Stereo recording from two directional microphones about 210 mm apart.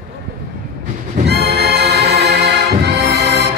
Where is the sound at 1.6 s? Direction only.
50° right (ahead or behind).